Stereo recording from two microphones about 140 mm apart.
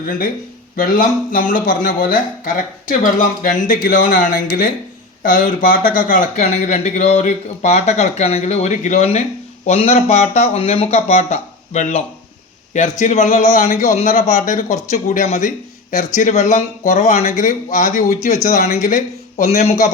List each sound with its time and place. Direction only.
0.8 s speech: 75° left (ahead or behind)
19.4 s speech: 55° left (ahead or behind)